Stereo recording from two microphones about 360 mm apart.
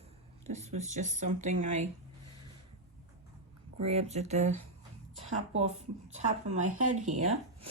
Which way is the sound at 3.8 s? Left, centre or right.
Centre.